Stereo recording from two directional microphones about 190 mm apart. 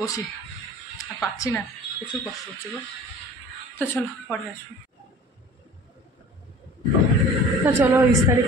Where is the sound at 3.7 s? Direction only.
10° left (ahead or behind).